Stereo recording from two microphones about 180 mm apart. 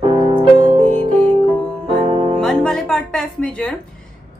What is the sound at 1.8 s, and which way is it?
Music, 35° right (ahead or behind).